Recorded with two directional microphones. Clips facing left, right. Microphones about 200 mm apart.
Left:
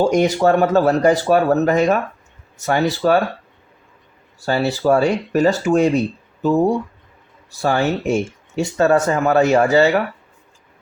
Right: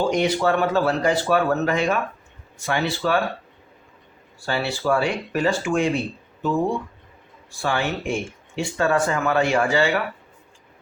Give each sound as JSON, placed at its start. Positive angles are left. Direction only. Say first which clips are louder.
{"t": 0.0, "sound": "speech", "louder": "left 5 dB", "side_deg": 45}
{"t": 4.4, "sound": "speech", "louder": "left 6 dB", "side_deg": 40}